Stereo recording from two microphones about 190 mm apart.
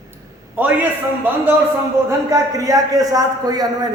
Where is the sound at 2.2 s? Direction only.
20° right (ahead or behind).